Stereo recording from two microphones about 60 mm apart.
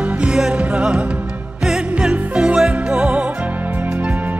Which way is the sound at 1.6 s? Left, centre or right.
Centre.